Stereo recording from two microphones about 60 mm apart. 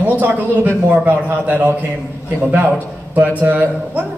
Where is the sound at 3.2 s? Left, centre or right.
Right.